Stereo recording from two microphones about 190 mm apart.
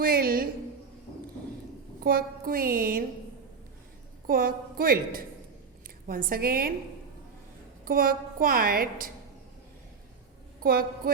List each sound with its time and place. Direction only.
0.0 s a sound: 50° right (ahead or behind)
2.0 s a woman's voice: 50° right (ahead or behind)
4.3 s a woman's voice: 50° right (ahead or behind)
7.9 s a woman's voice: 50° right (ahead or behind)
10.6 s a woman's voice: 50° right (ahead or behind)